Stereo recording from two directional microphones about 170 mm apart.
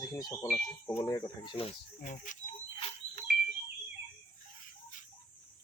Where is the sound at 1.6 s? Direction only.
45° left (ahead or behind).